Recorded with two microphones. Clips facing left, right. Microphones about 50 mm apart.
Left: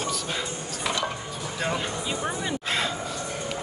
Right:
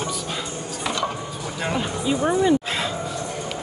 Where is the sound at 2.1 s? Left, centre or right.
Centre.